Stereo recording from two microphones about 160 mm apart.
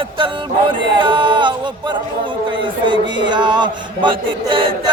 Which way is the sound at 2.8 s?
30° right (ahead or behind).